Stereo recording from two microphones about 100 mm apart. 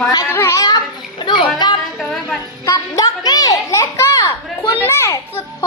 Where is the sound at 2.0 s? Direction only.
5° left (ahead or behind).